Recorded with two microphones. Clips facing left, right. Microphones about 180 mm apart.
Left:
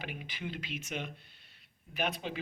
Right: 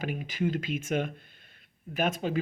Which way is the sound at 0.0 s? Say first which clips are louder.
Right 11 dB; 45° right (ahead or behind).